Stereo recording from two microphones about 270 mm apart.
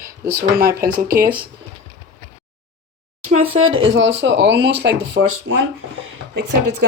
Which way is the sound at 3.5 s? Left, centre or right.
Right.